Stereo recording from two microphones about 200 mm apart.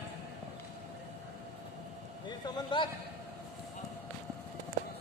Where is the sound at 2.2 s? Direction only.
20° left (ahead or behind).